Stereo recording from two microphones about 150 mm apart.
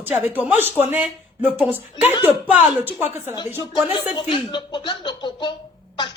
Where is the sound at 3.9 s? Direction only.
30° left (ahead or behind).